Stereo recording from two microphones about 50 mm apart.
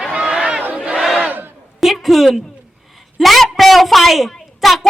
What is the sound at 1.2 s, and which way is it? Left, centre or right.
Battle cry, right.